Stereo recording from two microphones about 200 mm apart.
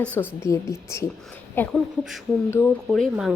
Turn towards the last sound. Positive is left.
turn(degrees=0)  # may be behind; listen again after turning